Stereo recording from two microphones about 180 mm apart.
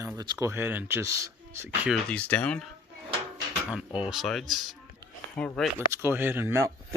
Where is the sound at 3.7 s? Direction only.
5° right (ahead or behind).